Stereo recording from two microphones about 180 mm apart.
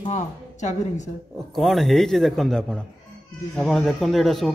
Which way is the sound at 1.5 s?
Centre (ahead or behind).